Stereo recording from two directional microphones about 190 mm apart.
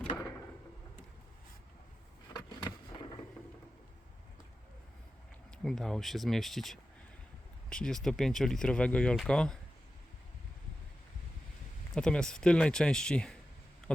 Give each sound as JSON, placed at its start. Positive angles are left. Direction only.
{"t": 2.3, "sound": "skateboard", "side_deg": 25}
{"t": 5.6, "sound": "speech", "side_deg": 0}
{"t": 11.9, "sound": "speech", "side_deg": 5}